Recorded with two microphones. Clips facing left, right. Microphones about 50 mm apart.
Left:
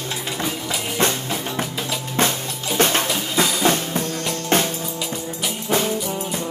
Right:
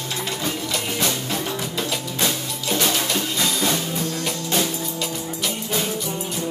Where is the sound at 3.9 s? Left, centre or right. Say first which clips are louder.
Left 1 dB; left.